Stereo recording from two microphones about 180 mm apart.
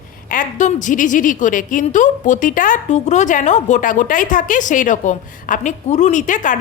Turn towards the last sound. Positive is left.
turn(degrees=45)  # may be behind; listen again after turning